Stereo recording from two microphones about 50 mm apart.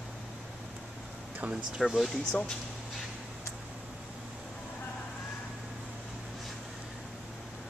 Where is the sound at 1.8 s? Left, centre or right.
Centre.